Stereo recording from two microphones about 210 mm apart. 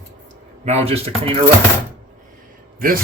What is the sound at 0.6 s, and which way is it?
Speech, 30° right (ahead or behind).